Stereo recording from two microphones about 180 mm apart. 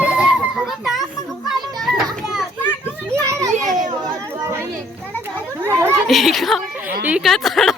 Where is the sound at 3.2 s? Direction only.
15° right (ahead or behind).